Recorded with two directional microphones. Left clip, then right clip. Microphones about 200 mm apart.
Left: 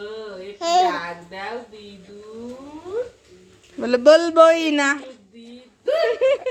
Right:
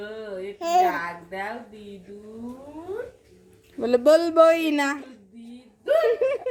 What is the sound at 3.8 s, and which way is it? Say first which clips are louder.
Speech: left 4 dB; centre (ahead or behind).